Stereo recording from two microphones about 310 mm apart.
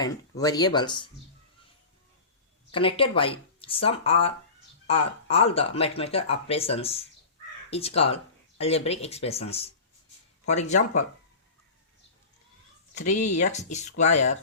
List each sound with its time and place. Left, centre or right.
0.0 s speech: centre
2.7 s speech: centre
13.2 s speech: left
13.5 s speech: left